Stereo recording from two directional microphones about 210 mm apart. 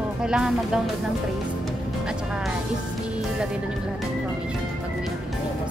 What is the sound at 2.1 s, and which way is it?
Music, 5° right (ahead or behind).